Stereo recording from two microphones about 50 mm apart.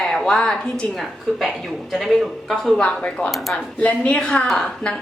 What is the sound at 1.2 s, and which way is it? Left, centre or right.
Speech, centre.